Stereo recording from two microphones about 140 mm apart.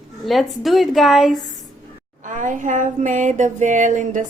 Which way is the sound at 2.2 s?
65° right (ahead or behind).